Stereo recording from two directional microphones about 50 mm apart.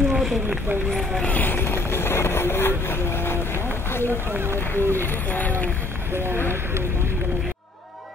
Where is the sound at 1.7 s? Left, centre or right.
Left.